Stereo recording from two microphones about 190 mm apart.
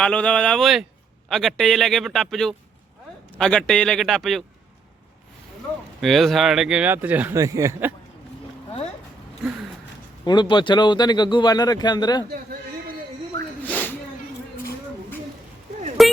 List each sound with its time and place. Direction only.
0.0 s speech: 5° left (ahead or behind)
6.0 s speech: centre (ahead or behind)
10.2 s speech: 25° left (ahead or behind)
13.7 s snort: 10° left (ahead or behind)
16.0 s a sound: centre (ahead or behind)